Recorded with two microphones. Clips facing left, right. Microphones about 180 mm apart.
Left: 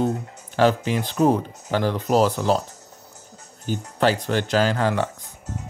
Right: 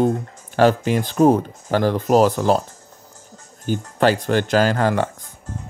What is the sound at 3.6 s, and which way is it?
Speech, 50° right (ahead or behind).